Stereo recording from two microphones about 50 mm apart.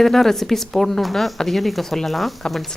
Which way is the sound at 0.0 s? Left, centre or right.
Centre.